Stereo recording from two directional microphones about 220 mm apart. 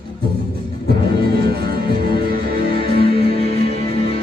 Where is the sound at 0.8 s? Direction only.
45° right (ahead or behind).